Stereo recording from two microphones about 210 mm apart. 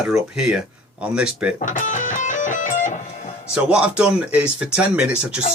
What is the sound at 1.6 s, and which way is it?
Music, 35° left (ahead or behind).